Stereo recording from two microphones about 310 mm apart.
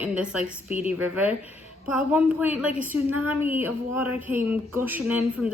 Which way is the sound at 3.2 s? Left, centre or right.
Centre.